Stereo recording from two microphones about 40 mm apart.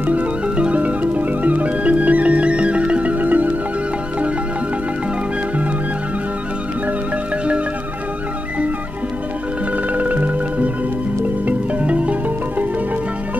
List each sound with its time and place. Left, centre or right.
0.0 s music: right
9.9 s music: right